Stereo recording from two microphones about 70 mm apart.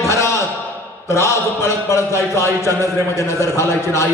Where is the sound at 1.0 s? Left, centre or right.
Left.